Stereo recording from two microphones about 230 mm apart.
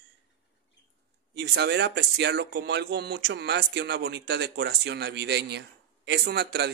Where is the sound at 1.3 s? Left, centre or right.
Right.